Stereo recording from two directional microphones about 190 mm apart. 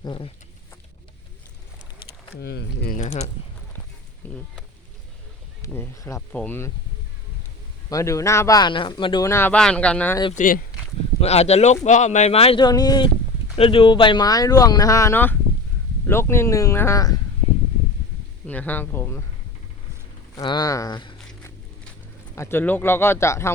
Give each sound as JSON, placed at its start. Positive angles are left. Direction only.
{"t": 0.0, "sound": "speech", "side_deg": 25}
{"t": 2.3, "sound": "speech", "side_deg": 60}
{"t": 3.0, "sound": "speech", "side_deg": 35}
{"t": 4.2, "sound": "speech", "side_deg": 10}
{"t": 5.6, "sound": "speech", "side_deg": 15}
{"t": 7.9, "sound": "speech", "side_deg": 15}
{"t": 10.3, "sound": "speech", "side_deg": 45}
{"t": 11.2, "sound": "speech", "side_deg": 35}
{"t": 18.4, "sound": "speech", "side_deg": 10}
{"t": 20.3, "sound": "speech", "side_deg": 20}
{"t": 22.4, "sound": "speech", "side_deg": 10}